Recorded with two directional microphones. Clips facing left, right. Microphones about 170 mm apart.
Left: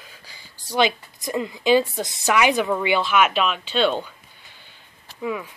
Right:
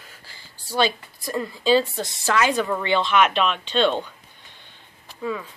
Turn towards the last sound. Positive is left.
turn(degrees=15)  # may be behind; listen again after turning